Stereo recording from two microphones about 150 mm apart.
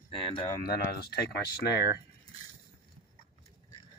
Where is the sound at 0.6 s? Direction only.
90° left.